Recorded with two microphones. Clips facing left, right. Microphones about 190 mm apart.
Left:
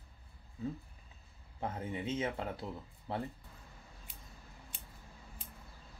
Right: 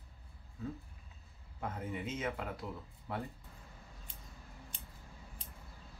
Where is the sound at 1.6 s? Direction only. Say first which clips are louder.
Left 2 dB; 30° left (ahead or behind).